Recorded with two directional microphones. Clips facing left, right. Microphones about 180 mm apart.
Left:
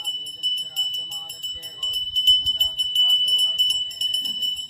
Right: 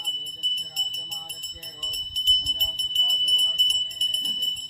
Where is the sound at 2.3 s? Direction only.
15° right (ahead or behind).